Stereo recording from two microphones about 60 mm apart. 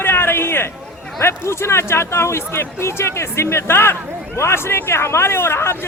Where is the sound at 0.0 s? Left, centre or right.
Left.